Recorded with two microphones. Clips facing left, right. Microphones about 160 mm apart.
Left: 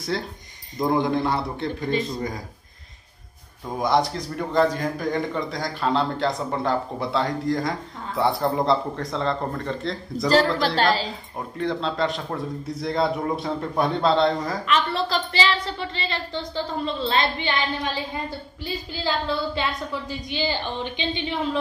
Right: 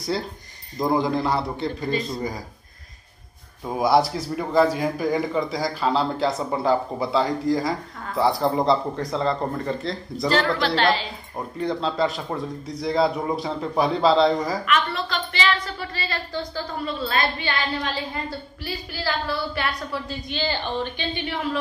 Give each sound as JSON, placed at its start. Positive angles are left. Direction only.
{"t": 0.7, "sound": "a man's voice", "side_deg": 0}
{"t": 3.7, "sound": "a man's voice", "side_deg": -5}
{"t": 10.3, "sound": "speech", "side_deg": 40}
{"t": 11.3, "sound": "a man's voice", "side_deg": 0}
{"t": 14.7, "sound": "a woman's voice", "side_deg": 30}